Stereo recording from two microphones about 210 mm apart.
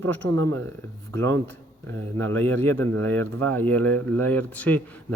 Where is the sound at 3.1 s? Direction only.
90° right.